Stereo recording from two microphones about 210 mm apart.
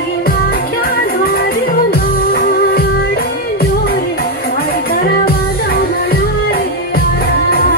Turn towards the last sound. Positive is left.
turn(degrees=45)  # may be behind; listen again after turning